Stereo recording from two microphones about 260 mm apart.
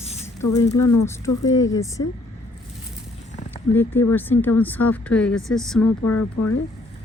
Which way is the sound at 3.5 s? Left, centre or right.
Centre.